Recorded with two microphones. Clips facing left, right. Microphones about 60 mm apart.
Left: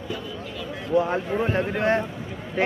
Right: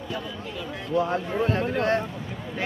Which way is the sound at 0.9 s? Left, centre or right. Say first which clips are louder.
Left 2 dB; centre.